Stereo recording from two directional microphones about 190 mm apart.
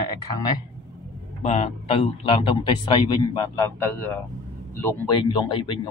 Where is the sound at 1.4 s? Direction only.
35° left (ahead or behind).